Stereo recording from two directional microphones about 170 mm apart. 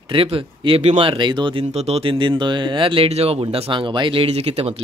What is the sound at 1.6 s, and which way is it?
Speech, 40° right (ahead or behind).